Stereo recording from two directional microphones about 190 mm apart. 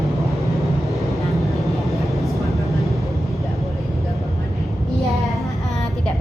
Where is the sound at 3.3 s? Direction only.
Centre (ahead or behind).